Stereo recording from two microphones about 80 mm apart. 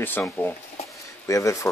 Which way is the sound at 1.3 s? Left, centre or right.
Left.